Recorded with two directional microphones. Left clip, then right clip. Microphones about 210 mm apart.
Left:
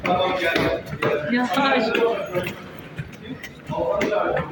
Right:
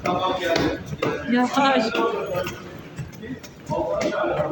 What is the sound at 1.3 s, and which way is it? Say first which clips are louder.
Speech: right 3 dB; 5° right (ahead or behind).